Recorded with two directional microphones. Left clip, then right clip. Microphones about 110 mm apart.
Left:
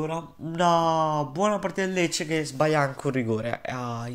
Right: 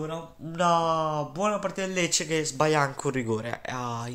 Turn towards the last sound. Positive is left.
turn(degrees=0)  # may be behind; listen again after turning